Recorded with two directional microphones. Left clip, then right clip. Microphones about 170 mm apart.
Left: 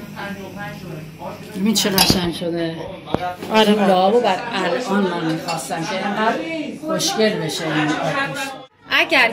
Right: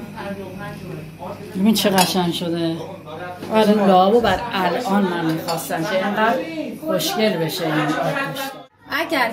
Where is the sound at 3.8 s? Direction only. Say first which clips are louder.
Right 1 dB; 60° right (ahead or behind).